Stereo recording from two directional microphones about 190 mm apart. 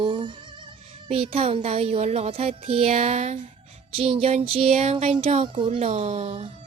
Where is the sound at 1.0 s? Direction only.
30° right (ahead or behind).